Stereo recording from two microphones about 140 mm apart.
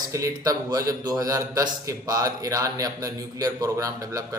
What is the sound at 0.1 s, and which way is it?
A man's voice, 20° right (ahead or behind).